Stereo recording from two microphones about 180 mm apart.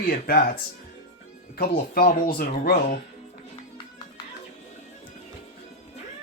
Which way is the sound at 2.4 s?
55° left (ahead or behind).